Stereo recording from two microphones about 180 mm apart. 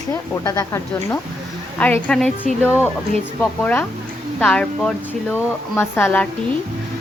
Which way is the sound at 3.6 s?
10° left (ahead or behind).